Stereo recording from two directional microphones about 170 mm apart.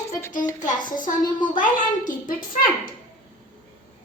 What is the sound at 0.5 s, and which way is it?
A woman's voice, 50° left (ahead or behind).